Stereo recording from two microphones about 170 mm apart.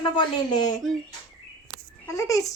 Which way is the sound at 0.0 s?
25° left (ahead or behind).